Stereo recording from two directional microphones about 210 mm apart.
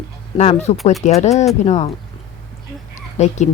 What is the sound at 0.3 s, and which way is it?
Speech, 30° left (ahead or behind).